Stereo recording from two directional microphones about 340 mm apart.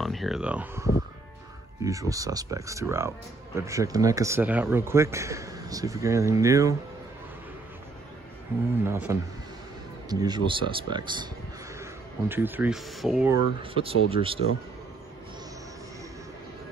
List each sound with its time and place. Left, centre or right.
0.0 s speech: centre
8.5 s speech: centre
13.6 s speech: centre